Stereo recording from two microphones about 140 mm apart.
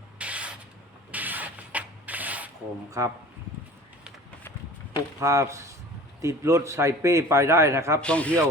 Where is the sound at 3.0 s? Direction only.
20° right (ahead or behind).